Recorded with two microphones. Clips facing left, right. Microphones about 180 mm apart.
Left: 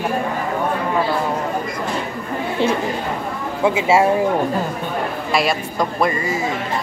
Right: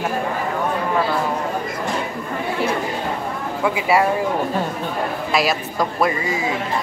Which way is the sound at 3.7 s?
25° left (ahead or behind).